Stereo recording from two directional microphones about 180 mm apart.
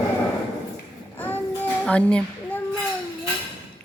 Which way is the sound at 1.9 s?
5° left (ahead or behind).